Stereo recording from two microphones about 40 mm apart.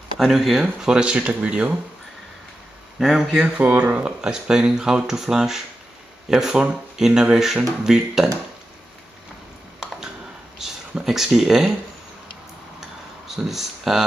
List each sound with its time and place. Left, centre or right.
0.2 s speech: centre
0.7 s speech: centre
3.0 s speech: centre
3.5 s speech: right
4.0 s speech: centre
11.1 s speech: centre
13.5 s speech: centre